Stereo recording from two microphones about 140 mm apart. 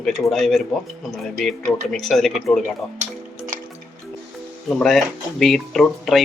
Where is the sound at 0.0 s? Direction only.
Centre (ahead or behind).